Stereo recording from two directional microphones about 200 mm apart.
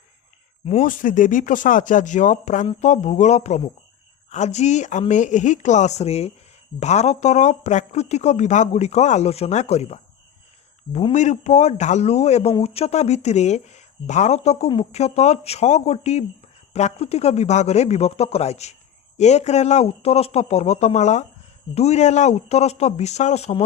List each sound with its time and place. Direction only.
0.6 s speech: 35° left (ahead or behind)